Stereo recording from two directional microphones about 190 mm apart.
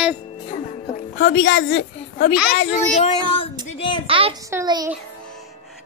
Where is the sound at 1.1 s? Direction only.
75° left (ahead or behind).